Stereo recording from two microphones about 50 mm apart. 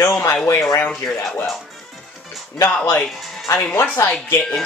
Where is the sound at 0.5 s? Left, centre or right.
Left.